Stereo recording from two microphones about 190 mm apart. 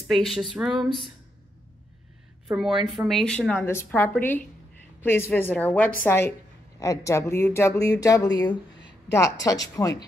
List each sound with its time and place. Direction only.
0.1 s speech: centre (ahead or behind)
2.4 s a woman's voice: centre (ahead or behind); by 10.0 s 20° left (ahead or behind)